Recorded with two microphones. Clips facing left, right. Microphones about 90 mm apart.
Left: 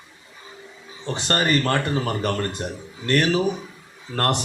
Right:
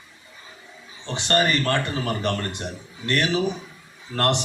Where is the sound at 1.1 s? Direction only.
35° left (ahead or behind).